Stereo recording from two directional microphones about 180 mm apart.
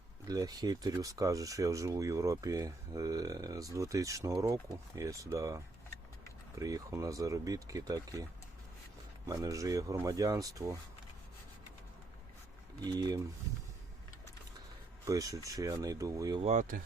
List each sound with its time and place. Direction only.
0.3 s speech: 20° right (ahead or behind)
12.8 s speech: 20° right (ahead or behind)
15.0 s speech: 20° right (ahead or behind)
16.4 s speech: 40° right (ahead or behind)